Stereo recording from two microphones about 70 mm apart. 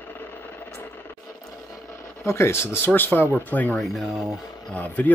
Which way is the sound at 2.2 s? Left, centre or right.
Left.